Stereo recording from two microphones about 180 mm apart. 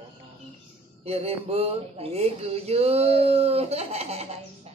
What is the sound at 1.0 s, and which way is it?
Speech, 35° right (ahead or behind).